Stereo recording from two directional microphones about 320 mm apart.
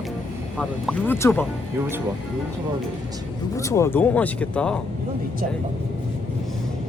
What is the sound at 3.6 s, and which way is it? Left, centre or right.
Speech, centre.